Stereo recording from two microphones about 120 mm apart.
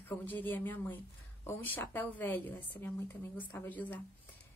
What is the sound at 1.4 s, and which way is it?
A woman's voice, 15° left (ahead or behind).